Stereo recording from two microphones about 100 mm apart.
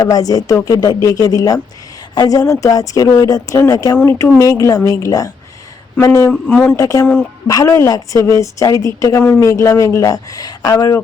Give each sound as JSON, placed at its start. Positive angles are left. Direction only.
{"t": 0.0, "sound": "a woman's voice", "side_deg": 40}
{"t": 4.0, "sound": "a woman's voice", "side_deg": 25}
{"t": 6.5, "sound": "speech", "side_deg": 10}
{"t": 6.7, "sound": "a woman's voice", "side_deg": 35}